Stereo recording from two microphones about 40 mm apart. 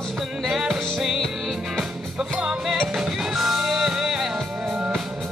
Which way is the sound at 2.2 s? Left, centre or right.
Centre.